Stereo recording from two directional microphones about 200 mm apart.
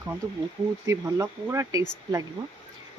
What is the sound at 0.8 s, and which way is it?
Speech, 15° right (ahead or behind).